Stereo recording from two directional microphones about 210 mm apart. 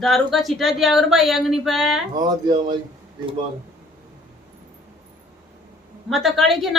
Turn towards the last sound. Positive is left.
turn(degrees=0)  # may be behind; listen again after turning